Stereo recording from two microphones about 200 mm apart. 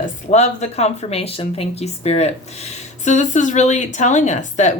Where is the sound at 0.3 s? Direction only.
35° left (ahead or behind).